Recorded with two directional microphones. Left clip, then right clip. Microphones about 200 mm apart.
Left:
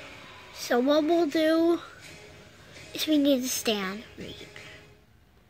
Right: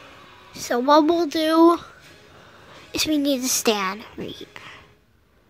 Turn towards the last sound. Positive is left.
turn(degrees=-40)  # may be behind; listen again after turning